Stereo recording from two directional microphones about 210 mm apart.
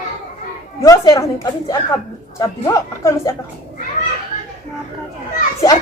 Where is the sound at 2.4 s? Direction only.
15° left (ahead or behind).